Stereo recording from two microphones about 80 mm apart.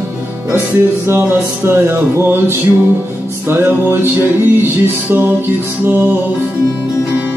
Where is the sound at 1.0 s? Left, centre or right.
Right.